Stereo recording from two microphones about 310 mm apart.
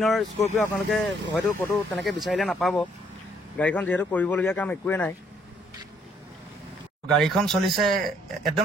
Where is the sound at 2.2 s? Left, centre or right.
Centre.